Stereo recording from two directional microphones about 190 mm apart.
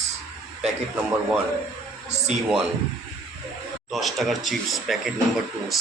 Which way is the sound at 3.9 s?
Centre (ahead or behind).